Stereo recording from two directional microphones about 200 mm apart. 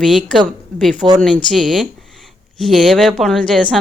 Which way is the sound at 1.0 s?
20° right (ahead or behind).